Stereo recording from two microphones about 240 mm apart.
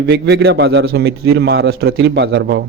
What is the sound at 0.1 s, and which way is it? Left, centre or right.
A man's voice, right.